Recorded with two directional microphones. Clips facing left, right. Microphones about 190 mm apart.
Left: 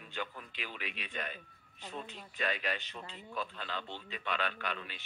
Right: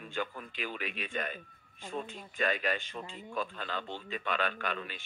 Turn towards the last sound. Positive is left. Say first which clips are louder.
# right 4 dB
turn(degrees=-50)  # may be behind; listen again after turning